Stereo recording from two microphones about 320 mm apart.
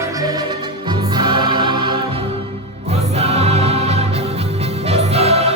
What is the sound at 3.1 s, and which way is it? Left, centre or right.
Music, centre.